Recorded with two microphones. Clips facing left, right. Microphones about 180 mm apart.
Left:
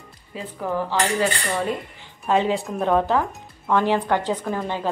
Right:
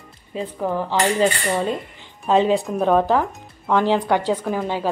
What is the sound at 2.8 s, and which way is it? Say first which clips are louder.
A woman's voice: right 2 dB; 10° right (ahead or behind).